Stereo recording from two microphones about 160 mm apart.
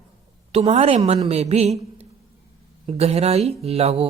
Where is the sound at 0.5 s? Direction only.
40° right (ahead or behind).